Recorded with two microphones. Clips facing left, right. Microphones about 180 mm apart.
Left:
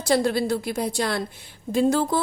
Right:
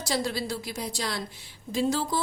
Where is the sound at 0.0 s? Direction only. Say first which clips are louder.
Left 8 dB; 55° left (ahead or behind).